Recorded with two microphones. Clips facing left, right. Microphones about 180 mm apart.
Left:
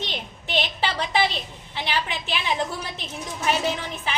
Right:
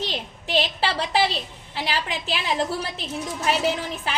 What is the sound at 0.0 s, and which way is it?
A woman's voice, 35° right (ahead or behind).